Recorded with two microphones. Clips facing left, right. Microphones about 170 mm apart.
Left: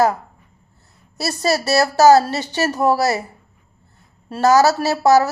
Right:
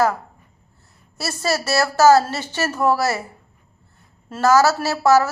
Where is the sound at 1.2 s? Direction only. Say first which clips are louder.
Left 3 dB; 35° left (ahead or behind).